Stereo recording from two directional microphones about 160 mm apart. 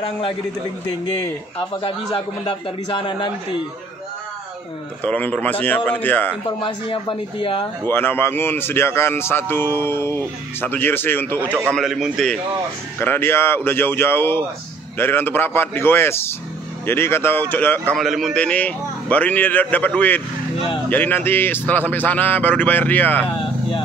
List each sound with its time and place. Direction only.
0.0 s a man's voice: 35° left (ahead or behind)
1.7 s a man's voice: 30° left (ahead or behind)
5.0 s speech: 10° left (ahead or behind)
6.6 s a man's voice: 30° left (ahead or behind)
7.8 s speech: 15° left (ahead or behind)
11.7 s a man's voice: centre (ahead or behind)
13.0 s speech: 15° left (ahead or behind)
17.9 s speech: centre (ahead or behind)